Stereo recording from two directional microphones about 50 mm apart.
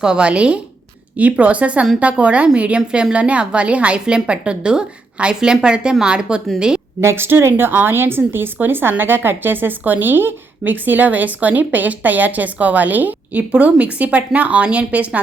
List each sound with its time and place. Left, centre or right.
0.0 s a woman's voice: centre
7.0 s a woman's voice: right